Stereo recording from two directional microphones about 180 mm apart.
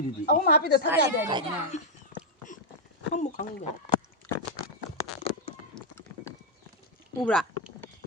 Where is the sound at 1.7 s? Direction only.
40° left (ahead or behind).